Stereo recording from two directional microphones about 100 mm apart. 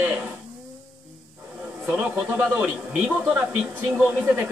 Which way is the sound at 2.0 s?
10° right (ahead or behind).